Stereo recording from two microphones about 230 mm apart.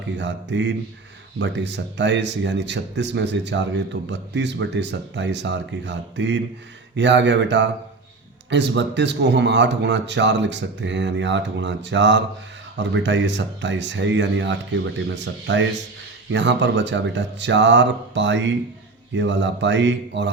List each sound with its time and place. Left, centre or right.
0.0 s a man's voice: right